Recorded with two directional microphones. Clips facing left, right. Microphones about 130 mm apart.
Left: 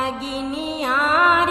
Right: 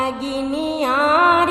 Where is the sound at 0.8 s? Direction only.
45° right (ahead or behind).